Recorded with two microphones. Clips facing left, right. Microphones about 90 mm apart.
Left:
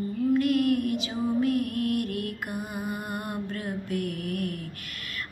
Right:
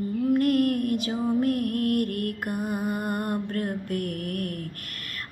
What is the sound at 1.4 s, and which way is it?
Music, 50° right (ahead or behind).